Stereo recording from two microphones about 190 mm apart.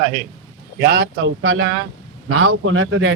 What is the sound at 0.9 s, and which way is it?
A man's voice, 75° right (ahead or behind).